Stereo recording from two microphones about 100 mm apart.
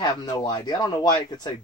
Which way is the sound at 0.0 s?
45° left (ahead or behind).